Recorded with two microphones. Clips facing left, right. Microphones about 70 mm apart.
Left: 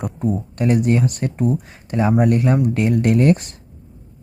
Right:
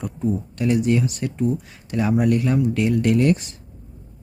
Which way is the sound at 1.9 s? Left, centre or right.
Left.